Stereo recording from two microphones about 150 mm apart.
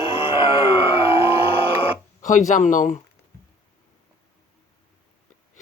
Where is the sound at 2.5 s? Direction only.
60° left (ahead or behind).